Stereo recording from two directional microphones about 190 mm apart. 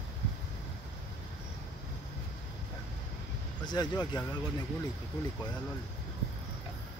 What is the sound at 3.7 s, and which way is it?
Speech, 20° left (ahead or behind).